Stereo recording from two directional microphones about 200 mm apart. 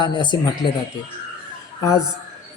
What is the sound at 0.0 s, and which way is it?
Speech, 20° left (ahead or behind).